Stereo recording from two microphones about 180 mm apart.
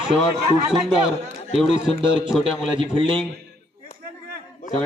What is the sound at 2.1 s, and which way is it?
Speech, 5° right (ahead or behind).